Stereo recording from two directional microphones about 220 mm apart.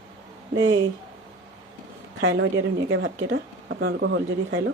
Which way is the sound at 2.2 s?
60° right (ahead or behind).